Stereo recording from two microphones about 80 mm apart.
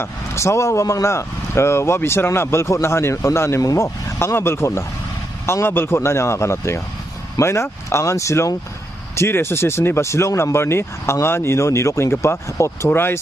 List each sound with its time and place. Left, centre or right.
0.0 s speech: left